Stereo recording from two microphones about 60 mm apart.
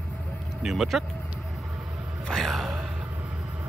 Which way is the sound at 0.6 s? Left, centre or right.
Centre.